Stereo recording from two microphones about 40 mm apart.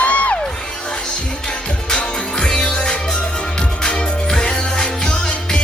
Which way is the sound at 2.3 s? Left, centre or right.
Centre.